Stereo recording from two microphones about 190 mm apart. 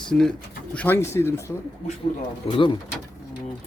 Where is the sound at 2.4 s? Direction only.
25° left (ahead or behind).